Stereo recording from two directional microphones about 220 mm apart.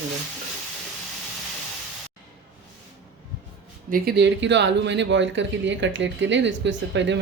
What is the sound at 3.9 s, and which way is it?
Speech, 45° right (ahead or behind).